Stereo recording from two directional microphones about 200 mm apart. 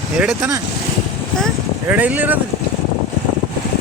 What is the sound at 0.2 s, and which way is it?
Speech, 10° right (ahead or behind).